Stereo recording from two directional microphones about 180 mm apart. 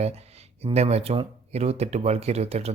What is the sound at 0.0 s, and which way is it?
Speech, 35° right (ahead or behind).